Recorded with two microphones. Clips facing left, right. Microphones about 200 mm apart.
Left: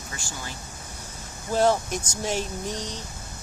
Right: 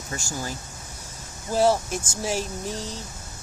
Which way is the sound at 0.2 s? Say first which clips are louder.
Right 6 dB; 45° right (ahead or behind).